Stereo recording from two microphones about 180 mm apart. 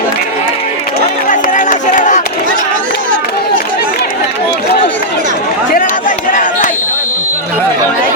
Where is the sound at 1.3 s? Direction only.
45° left (ahead or behind).